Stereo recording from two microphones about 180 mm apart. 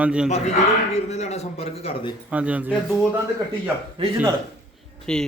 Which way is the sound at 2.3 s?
10° right (ahead or behind).